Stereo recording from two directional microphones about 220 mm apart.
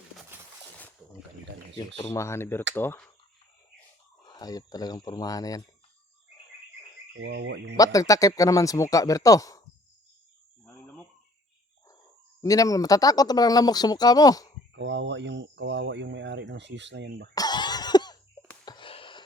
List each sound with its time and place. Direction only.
0.3 s a sound: 10° right (ahead or behind)
2.1 s speech: 10° left (ahead or behind)
4.2 s speech: 20° left (ahead or behind)
7.1 s speech: 55° right (ahead or behind)
7.8 s speech: 15° left (ahead or behind)
12.4 s speech: 15° left (ahead or behind)
14.7 s speech: 55° right (ahead or behind)
17.3 s cough: 20° left (ahead or behind)
18.6 s a sound: 20° left (ahead or behind)